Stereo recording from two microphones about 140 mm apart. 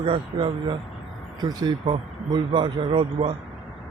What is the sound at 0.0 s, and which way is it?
Speech, 40° right (ahead or behind).